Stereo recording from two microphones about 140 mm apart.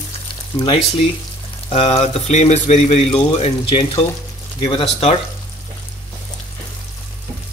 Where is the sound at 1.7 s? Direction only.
45° left (ahead or behind).